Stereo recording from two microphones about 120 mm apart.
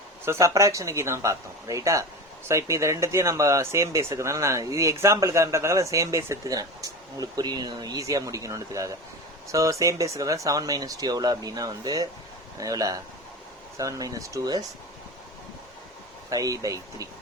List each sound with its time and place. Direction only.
0.3 s speech: 25° right (ahead or behind)
16.3 s speech: 30° right (ahead or behind)